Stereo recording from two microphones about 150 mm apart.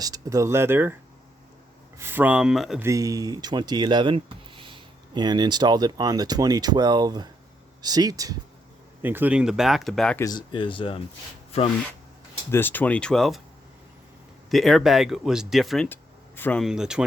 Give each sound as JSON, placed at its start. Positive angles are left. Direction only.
{"t": 0.0, "sound": "speech", "side_deg": -25}
{"t": 2.0, "sound": "speech", "side_deg": -15}
{"t": 2.8, "sound": "speech", "side_deg": -20}
{"t": 9.0, "sound": "speech", "side_deg": -15}
{"t": 10.2, "sound": "speech", "side_deg": 25}
{"t": 12.5, "sound": "speech", "side_deg": 15}
{"t": 14.5, "sound": "speech", "side_deg": 0}
{"t": 15.9, "sound": "a sound", "side_deg": 15}
{"t": 16.6, "sound": "speech", "side_deg": -5}